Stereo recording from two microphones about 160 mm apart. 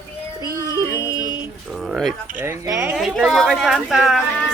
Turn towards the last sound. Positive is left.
turn(degrees=0)  # may be behind; listen again after turning